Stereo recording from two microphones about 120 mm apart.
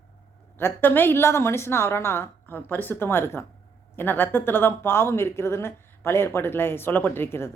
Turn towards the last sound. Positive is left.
turn(degrees=20)  # may be behind; listen again after turning